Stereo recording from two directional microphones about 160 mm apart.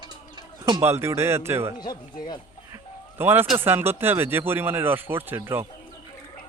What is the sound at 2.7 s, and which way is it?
Music, 15° right (ahead or behind).